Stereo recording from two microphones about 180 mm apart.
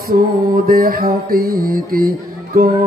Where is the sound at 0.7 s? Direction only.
55° right (ahead or behind).